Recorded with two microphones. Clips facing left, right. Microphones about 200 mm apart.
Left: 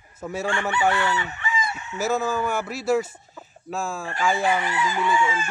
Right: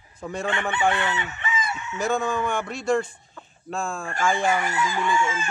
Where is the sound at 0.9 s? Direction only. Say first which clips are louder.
Left 1 dB; 20° right (ahead or behind).